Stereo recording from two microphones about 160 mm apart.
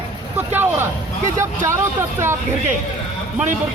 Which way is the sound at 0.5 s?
15° right (ahead or behind).